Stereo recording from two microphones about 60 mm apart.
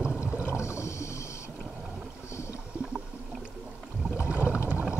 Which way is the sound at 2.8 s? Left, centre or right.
Centre.